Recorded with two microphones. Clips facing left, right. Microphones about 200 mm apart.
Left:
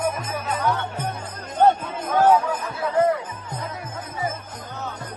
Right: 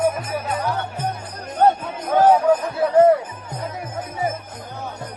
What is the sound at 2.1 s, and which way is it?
Music, 25° right (ahead or behind).